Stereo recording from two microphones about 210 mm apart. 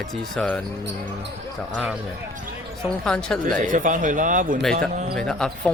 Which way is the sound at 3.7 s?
40° right (ahead or behind).